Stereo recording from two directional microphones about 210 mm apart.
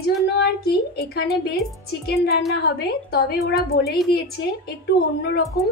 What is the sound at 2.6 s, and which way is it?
A woman's voice, 50° left (ahead or behind).